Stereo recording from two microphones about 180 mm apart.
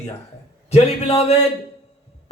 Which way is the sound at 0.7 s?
35° left (ahead or behind).